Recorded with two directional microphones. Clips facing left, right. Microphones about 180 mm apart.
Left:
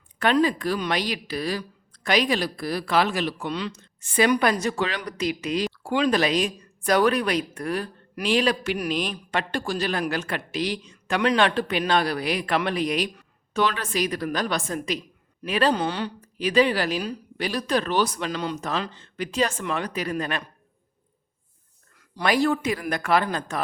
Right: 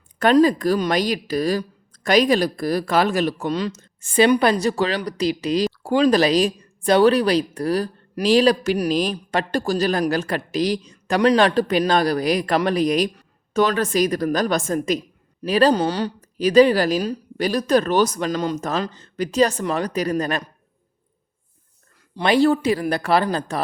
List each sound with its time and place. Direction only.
0.2 s a woman's voice: 40° right (ahead or behind)
4.2 s speech: 30° right (ahead or behind)
22.1 s speech: 25° right (ahead or behind)